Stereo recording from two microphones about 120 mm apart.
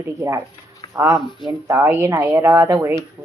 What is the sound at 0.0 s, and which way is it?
Speech, 20° right (ahead or behind).